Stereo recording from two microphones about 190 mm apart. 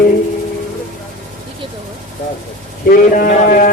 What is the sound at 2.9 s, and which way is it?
Speech, 45° left (ahead or behind).